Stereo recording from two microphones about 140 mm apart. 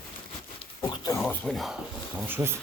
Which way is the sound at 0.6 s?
35° left (ahead or behind).